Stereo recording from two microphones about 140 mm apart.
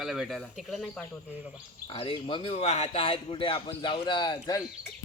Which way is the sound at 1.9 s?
40° left (ahead or behind).